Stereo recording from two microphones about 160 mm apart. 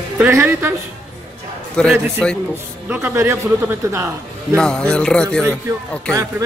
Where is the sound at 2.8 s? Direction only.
15° right (ahead or behind).